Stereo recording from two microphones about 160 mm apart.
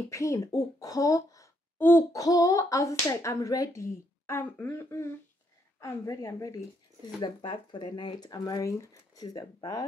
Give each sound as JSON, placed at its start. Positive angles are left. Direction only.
{"t": 0.1, "sound": "speech", "side_deg": 20}